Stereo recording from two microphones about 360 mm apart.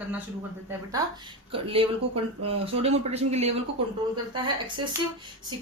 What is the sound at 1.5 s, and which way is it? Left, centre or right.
Speech, centre.